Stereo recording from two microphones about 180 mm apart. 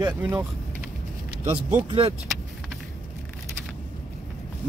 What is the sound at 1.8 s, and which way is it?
Speech, 30° right (ahead or behind).